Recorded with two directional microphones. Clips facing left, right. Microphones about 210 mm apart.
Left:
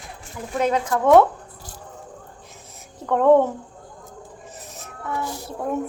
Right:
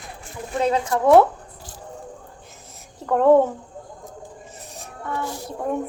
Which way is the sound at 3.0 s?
5° right (ahead or behind).